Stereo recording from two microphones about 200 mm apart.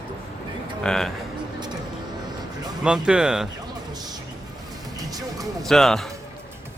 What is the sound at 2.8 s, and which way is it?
Speech, 5° right (ahead or behind).